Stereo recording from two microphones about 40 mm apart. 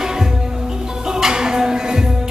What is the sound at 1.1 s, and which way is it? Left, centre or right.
Music, centre.